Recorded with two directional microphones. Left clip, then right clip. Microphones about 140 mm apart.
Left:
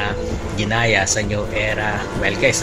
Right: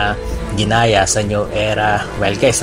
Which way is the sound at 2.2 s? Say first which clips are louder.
Right 2 dB; 15° right (ahead or behind).